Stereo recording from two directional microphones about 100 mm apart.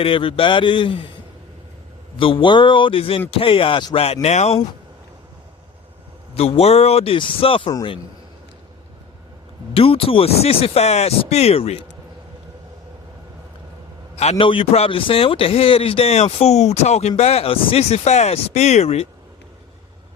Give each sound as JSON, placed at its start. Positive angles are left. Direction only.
{"t": 0.0, "sound": "speech", "side_deg": 60}
{"t": 2.1, "sound": "speech", "side_deg": 60}
{"t": 3.9, "sound": "a man's voice", "side_deg": 85}
{"t": 6.3, "sound": "a man's voice", "side_deg": 85}
{"t": 9.7, "sound": "speech", "side_deg": 65}
{"t": 14.2, "sound": "a man's voice", "side_deg": 75}